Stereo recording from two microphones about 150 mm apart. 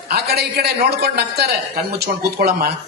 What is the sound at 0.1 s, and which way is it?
A man's voice, 90° right.